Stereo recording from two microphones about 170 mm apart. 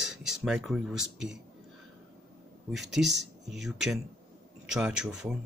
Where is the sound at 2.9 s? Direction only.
Centre (ahead or behind).